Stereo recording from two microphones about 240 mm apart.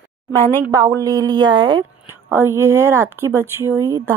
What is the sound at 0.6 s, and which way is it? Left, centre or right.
Speech, centre.